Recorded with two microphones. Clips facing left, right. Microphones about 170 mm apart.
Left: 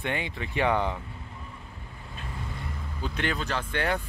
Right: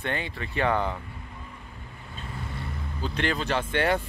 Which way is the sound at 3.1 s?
5° left (ahead or behind).